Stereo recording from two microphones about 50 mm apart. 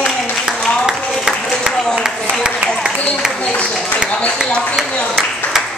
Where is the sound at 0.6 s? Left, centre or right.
Left.